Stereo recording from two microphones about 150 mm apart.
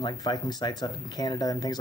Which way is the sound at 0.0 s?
30° left (ahead or behind).